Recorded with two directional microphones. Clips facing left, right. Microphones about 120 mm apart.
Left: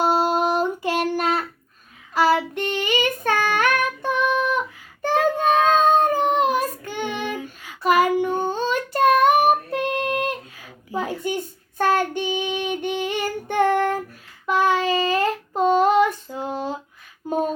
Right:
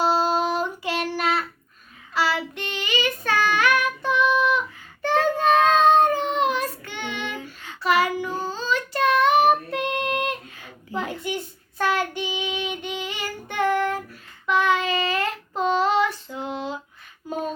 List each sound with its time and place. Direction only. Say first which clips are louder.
0.0 s child singing: left 2 dB; 55° left (ahead or behind)
5.1 s child singing: left 1 dB; 10° left (ahead or behind)
6.0 s child singing: left 1 dB; 40° left (ahead or behind)
9.7 s child singing: left 2 dB; 35° left (ahead or behind)
17.2 s a sound: left 6 dB; 50° left (ahead or behind)